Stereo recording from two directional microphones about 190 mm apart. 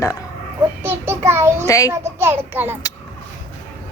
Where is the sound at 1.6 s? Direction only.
15° left (ahead or behind).